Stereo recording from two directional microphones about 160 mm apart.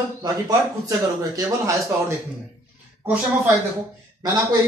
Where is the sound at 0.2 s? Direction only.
20° right (ahead or behind).